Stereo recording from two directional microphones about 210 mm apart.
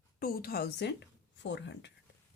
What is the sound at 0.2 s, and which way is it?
A woman's voice, 45° left (ahead or behind).